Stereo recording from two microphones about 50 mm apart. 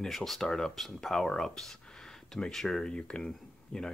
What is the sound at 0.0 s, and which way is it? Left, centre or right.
Speech, centre.